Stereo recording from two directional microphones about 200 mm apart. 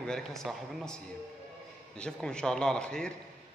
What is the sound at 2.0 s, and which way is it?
A man's voice, 5° left (ahead or behind).